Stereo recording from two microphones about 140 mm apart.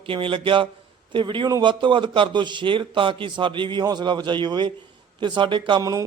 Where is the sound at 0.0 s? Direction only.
40° right (ahead or behind).